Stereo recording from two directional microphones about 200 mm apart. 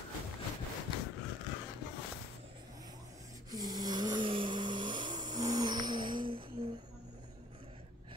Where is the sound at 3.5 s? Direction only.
20° right (ahead or behind).